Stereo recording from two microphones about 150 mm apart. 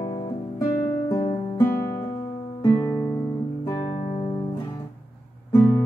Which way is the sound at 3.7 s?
35° left (ahead or behind).